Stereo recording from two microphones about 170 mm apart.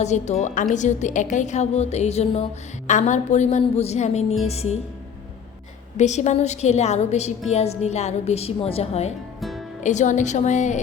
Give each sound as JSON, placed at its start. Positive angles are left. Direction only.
{"t": 0.0, "sound": "a woman's voice", "side_deg": 40}
{"t": 6.0, "sound": "a woman's voice", "side_deg": 45}
{"t": 9.4, "sound": "music", "side_deg": 0}
{"t": 9.8, "sound": "a woman's voice", "side_deg": 45}